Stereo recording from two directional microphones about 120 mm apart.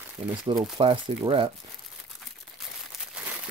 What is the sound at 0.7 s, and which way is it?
Speech, 45° right (ahead or behind).